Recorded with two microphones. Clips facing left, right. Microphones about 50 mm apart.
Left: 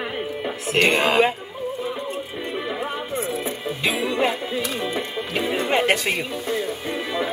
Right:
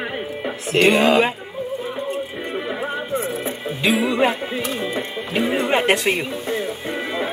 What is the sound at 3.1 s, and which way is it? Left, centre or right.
Music, right.